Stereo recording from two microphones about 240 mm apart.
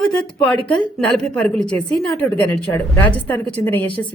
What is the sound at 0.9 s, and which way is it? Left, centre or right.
A woman's voice, centre.